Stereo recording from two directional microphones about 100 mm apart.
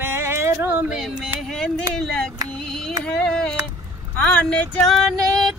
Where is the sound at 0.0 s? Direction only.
25° right (ahead or behind).